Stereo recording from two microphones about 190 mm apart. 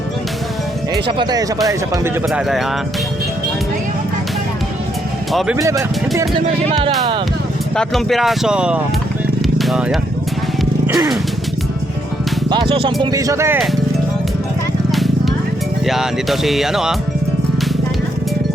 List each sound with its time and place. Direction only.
1.0 s speech: 20° right (ahead or behind)
2.3 s speech: centre (ahead or behind)
5.3 s speech: centre (ahead or behind)
5.5 s speech: 15° right (ahead or behind)
7.8 s speech: centre (ahead or behind)
10.8 s music: 15° right (ahead or behind)
12.5 s speech: 25° right (ahead or behind)
14.9 s music: centre (ahead or behind)
15.9 s speech: centre (ahead or behind)